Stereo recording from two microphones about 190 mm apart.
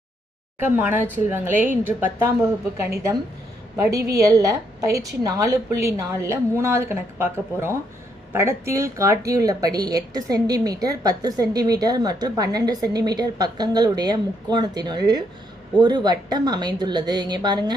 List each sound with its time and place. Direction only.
0.6 s a woman's voice: 10° right (ahead or behind)